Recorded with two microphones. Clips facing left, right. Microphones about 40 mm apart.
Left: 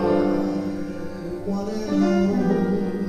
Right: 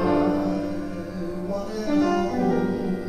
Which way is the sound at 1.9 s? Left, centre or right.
Centre.